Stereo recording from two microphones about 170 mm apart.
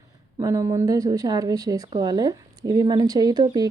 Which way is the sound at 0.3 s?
20° right (ahead or behind).